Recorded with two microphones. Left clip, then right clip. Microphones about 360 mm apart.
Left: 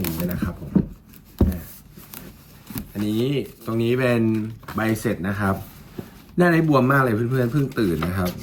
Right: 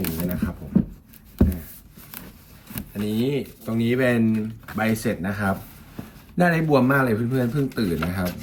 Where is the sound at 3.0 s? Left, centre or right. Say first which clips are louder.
Left 1 dB; centre.